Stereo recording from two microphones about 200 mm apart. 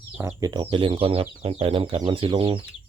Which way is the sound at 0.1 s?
15° right (ahead or behind).